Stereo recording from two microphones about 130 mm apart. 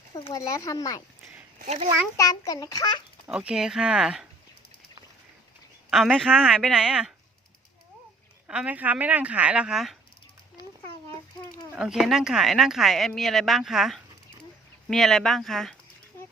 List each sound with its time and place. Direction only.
0.3 s a child's voice: 25° left (ahead or behind)
1.5 s speech: 65° right (ahead or behind)
2.1 s a child's voice: 25° left (ahead or behind)
3.2 s a woman's voice: 5° right (ahead or behind)
6.2 s a woman's voice: 5° right (ahead or behind)
8.4 s speech: 10° right (ahead or behind)
11.7 s a woman's voice: 5° right (ahead or behind)